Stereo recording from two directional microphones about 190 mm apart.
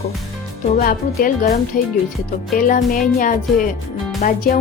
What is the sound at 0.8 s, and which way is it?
Speech, 50° left (ahead or behind).